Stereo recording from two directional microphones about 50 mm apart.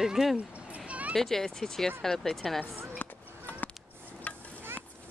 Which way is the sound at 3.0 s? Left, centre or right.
Left.